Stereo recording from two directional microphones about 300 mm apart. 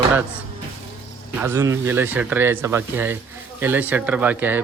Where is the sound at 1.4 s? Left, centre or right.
Centre.